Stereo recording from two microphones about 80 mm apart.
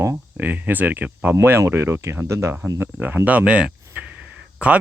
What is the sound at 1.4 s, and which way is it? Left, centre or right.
Speech, right.